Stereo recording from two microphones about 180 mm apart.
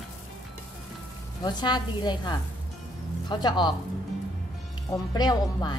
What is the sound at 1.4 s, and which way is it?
A woman's voice, 25° left (ahead or behind).